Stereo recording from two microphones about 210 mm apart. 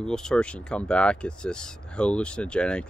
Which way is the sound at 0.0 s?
5° left (ahead or behind).